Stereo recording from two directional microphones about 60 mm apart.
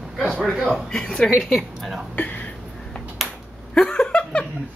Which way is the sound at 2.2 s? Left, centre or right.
Left.